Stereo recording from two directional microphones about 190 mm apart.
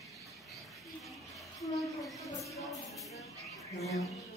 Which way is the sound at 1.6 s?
Centre (ahead or behind).